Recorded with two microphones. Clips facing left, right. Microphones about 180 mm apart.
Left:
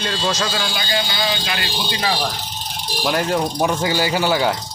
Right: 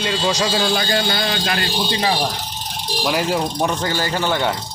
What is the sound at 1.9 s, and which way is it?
Speech, 30° right (ahead or behind).